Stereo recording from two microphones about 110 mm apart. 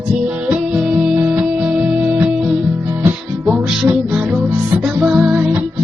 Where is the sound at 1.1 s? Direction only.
15° right (ahead or behind).